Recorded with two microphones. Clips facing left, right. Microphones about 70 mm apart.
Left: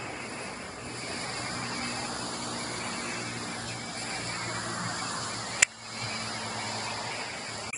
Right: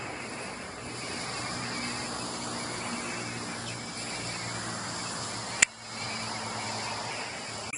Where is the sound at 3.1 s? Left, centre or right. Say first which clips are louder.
Even; left.